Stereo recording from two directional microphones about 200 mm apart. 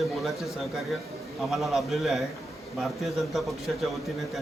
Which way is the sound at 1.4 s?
Centre (ahead or behind).